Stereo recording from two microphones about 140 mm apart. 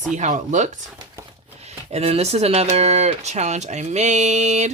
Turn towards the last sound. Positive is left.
turn(degrees=-55)  # may be behind; listen again after turning